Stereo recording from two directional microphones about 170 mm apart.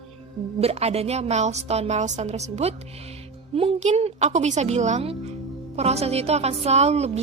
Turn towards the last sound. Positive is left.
turn(degrees=-40)  # may be behind; listen again after turning